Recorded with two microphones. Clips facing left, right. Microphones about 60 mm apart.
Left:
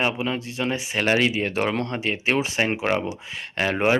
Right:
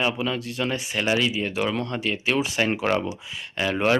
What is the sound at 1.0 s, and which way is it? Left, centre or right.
Speech, left.